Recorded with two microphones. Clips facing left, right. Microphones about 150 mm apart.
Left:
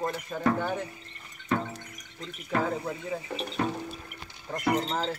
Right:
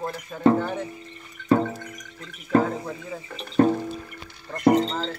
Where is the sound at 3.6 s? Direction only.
45° right (ahead or behind).